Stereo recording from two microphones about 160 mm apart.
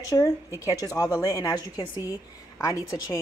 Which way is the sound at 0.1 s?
15° left (ahead or behind).